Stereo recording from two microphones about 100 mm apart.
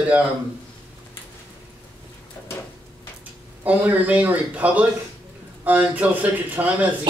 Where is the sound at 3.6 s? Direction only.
15° right (ahead or behind).